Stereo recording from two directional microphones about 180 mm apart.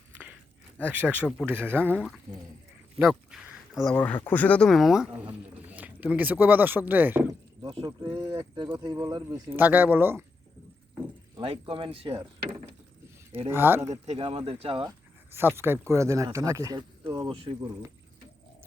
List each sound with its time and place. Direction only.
0.1 s a sound: 10° right (ahead or behind)
0.9 s speech: 10° right (ahead or behind)
2.0 s speech: centre (ahead or behind)
3.0 s a sound: centre (ahead or behind)
3.9 s speech: 10° left (ahead or behind); by 7.7 s 10° right (ahead or behind)
7.7 s speech: 25° right (ahead or behind)
11.3 s speech: 30° right (ahead or behind)
13.5 s speech: 10° right (ahead or behind)
14.1 s speech: 35° right (ahead or behind)
15.3 s speech: 10° right (ahead or behind); by 17.6 s 30° right (ahead or behind)